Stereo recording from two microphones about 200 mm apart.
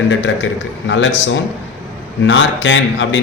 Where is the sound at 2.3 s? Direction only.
65° left (ahead or behind).